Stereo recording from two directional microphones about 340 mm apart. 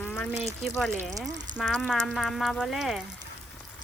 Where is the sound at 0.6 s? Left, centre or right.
Centre.